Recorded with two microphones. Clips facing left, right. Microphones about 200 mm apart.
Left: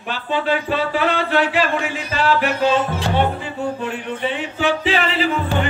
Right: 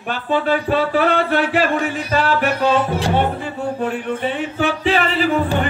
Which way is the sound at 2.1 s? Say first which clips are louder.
Even; 50° right (ahead or behind).